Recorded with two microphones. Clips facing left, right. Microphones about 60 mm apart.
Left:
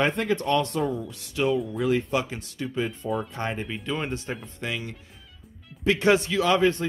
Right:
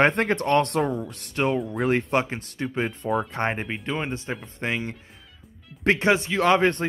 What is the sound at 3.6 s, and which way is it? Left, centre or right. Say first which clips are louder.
Speech: right 1 dB; right.